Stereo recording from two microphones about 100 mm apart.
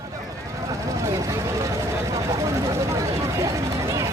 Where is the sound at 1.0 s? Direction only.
30° right (ahead or behind).